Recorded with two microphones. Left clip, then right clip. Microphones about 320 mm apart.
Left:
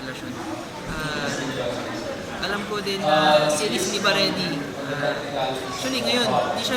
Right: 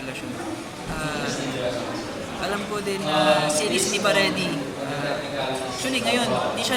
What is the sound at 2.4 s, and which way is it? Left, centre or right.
Speech, centre.